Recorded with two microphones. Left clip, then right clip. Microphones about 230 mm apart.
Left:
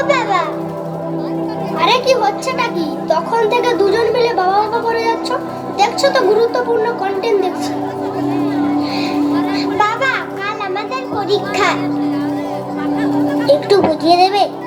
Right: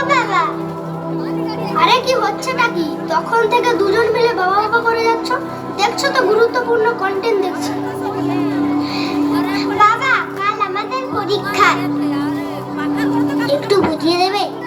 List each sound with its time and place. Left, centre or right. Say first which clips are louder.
0.1 s children playing: right 1 dB; left
1.8 s speech: left 1 dB; left
9.3 s music: left 1 dB; right
9.8 s children playing: right 5 dB; left
11.3 s speech: right 1 dB; left
13.5 s a woman's voice: left 5 dB; left